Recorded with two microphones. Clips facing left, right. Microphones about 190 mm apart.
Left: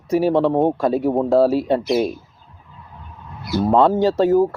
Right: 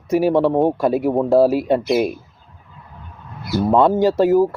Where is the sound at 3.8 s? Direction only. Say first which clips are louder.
Right 1 dB; 10° right (ahead or behind).